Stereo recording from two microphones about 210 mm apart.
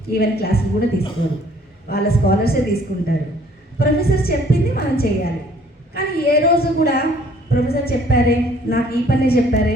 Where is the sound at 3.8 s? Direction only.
45° left (ahead or behind).